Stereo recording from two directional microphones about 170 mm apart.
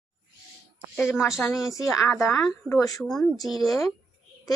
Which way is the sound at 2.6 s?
20° left (ahead or behind).